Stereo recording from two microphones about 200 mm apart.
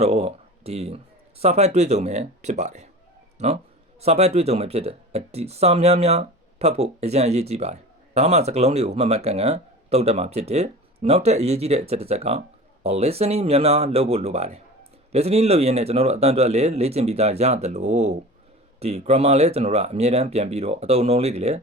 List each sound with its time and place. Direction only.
0.0 s speech: 30° right (ahead or behind)